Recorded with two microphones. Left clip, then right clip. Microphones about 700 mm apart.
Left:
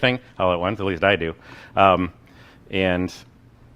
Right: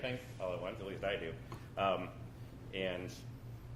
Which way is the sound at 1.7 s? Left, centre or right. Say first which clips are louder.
Left 19 dB; left.